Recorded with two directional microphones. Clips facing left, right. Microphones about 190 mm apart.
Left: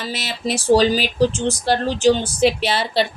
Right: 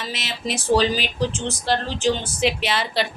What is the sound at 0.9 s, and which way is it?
Speech, 5° left (ahead or behind).